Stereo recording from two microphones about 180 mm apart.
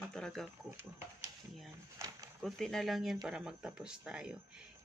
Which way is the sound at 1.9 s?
15° right (ahead or behind).